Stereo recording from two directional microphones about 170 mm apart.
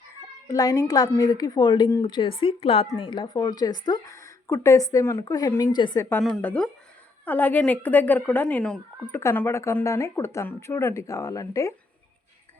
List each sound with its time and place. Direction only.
0.4 s a woman's voice: 20° left (ahead or behind)
6.1 s speech: 10° left (ahead or behind)